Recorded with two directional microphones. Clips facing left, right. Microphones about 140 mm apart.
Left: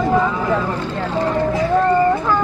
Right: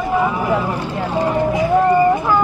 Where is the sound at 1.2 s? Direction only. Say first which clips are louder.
Right 1 dB; 15° right (ahead or behind).